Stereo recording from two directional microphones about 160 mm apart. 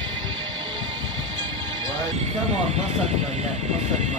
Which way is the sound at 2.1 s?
45° right (ahead or behind).